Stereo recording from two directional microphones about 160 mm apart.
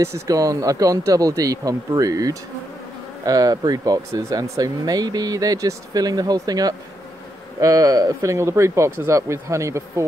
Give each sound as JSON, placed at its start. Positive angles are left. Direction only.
{"t": 0.0, "sound": "speech", "side_deg": -20}